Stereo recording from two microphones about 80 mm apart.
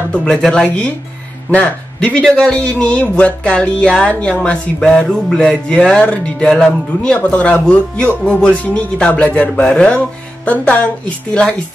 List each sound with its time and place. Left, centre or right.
0.1 s speech: centre